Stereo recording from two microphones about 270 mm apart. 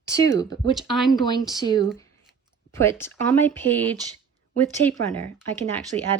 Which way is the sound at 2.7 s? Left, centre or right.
Centre.